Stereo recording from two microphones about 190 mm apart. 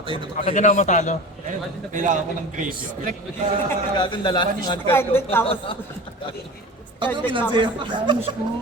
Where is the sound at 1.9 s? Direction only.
40° right (ahead or behind).